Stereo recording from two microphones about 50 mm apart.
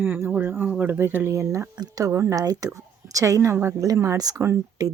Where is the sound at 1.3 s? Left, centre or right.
Right.